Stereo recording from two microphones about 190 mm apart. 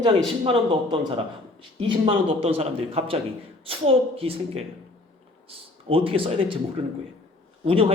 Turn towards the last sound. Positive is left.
turn(degrees=-30)  # may be behind; listen again after turning